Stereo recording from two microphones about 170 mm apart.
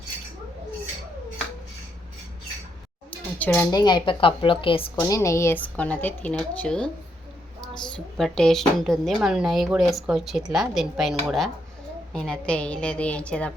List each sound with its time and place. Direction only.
3.3 s speech: 10° left (ahead or behind)
3.7 s a woman's voice: 25° left (ahead or behind)
4.9 s speech: 20° left (ahead or behind)
7.9 s speech: 5° left (ahead or behind)